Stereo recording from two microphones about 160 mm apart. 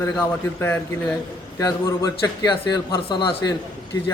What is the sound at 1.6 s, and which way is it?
A man's voice, 20° left (ahead or behind).